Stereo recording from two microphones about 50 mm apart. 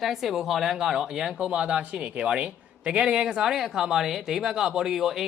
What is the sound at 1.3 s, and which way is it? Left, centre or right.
Speech, centre.